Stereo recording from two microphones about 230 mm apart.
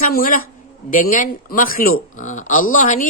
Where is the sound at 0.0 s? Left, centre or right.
Left.